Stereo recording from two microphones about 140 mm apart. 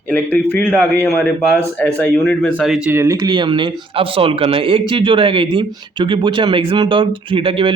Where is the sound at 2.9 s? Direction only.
20° right (ahead or behind).